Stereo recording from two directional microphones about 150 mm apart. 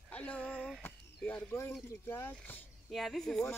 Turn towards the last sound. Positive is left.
turn(degrees=0)  # may be behind; listen again after turning